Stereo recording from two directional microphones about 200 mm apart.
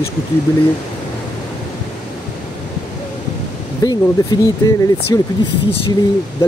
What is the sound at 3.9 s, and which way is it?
Speech, 20° left (ahead or behind).